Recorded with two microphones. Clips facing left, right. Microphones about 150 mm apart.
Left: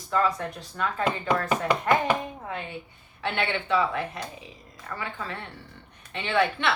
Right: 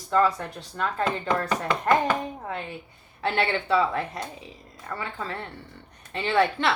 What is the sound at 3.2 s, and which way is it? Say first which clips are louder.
Speech: right 3 dB; 35° right (ahead or behind).